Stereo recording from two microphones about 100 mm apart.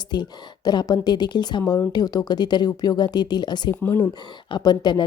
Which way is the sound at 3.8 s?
20° left (ahead or behind).